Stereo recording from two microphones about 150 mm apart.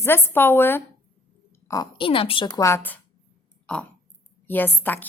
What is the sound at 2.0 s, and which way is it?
A woman's voice, 35° left (ahead or behind).